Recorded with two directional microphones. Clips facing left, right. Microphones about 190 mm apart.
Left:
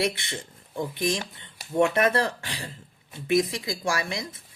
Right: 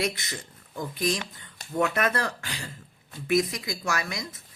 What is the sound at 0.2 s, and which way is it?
Speech, 30° left (ahead or behind).